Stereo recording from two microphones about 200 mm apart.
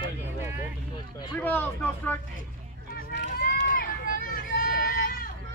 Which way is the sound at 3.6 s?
45° left (ahead or behind).